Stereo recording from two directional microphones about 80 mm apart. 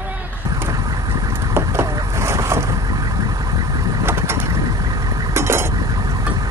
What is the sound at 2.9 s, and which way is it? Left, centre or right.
Vehicle, right.